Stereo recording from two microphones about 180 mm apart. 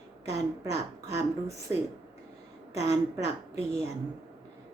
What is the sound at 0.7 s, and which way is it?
Speech, 15° right (ahead or behind).